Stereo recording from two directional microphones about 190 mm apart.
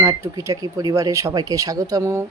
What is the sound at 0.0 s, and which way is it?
Speech, 15° right (ahead or behind).